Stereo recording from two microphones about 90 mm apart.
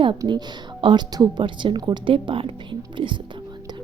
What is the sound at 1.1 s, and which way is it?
Speech, 45° right (ahead or behind).